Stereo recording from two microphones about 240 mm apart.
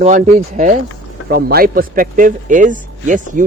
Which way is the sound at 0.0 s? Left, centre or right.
Right.